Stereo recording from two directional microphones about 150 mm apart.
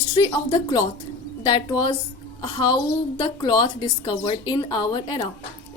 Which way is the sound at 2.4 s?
30° left (ahead or behind).